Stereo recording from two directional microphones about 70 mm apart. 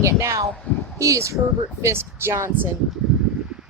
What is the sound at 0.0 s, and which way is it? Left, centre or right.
Speech, right.